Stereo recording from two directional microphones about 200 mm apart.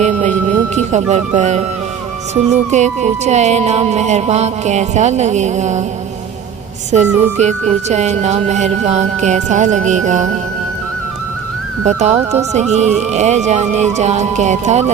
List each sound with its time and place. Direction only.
0.0 s music: 35° right (ahead or behind)
6.9 s music: 35° right (ahead or behind)
11.9 s music: 35° right (ahead or behind)